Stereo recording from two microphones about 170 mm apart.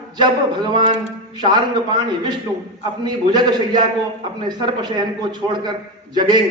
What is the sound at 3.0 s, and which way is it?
A man's voice, 25° right (ahead or behind).